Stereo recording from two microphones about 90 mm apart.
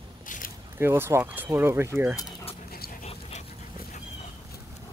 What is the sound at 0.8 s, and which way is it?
Speech, 25° right (ahead or behind).